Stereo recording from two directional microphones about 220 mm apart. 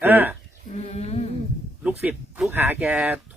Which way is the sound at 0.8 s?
30° left (ahead or behind).